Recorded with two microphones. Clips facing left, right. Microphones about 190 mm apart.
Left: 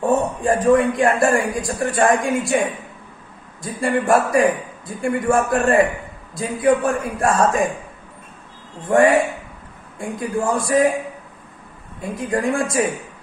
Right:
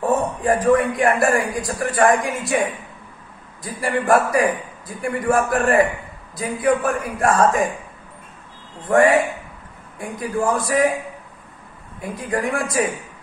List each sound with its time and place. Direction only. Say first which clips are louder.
0.5 s a man's voice: left 1 dB; 25° left (ahead or behind)
3.6 s a man's voice: left 1 dB; 25° left (ahead or behind)
8.8 s a man's voice: left 1 dB; 25° left (ahead or behind)
12.0 s a man's voice: left 2 dB; 25° left (ahead or behind)